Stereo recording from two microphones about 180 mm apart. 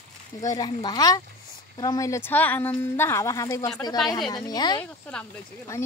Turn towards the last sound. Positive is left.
turn(degrees=5)  # may be behind; listen again after turning